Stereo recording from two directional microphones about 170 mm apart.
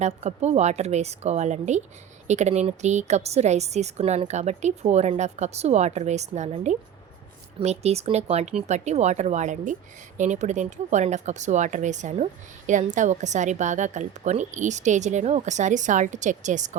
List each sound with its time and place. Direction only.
0.0 s a woman's voice: 40° right (ahead or behind)